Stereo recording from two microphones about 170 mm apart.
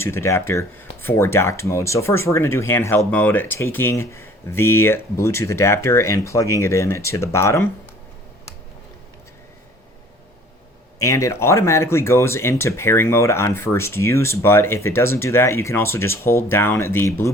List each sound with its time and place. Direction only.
0.0 s speech: 15° left (ahead or behind)
11.0 s speech: 15° left (ahead or behind)